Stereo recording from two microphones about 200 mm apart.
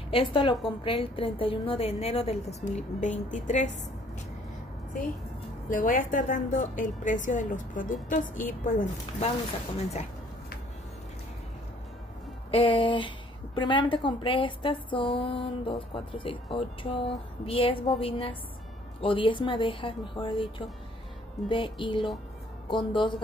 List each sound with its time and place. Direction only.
0.1 s a woman's voice: 25° left (ahead or behind)
5.7 s a woman's voice: 40° left (ahead or behind)
12.4 s a woman's voice: 25° left (ahead or behind)